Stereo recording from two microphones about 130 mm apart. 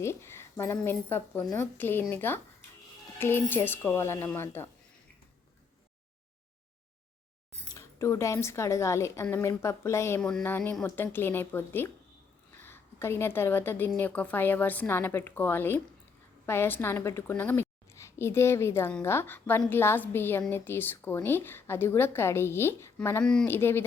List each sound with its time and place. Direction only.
0.0 s a woman's voice: 20° left (ahead or behind)
7.6 s speech: 25° left (ahead or behind)
10.2 s a sound: 5° left (ahead or behind)
10.4 s a woman's voice: 15° left (ahead or behind)
23.2 s a sound: 5° left (ahead or behind)
23.5 s a woman's voice: 15° left (ahead or behind)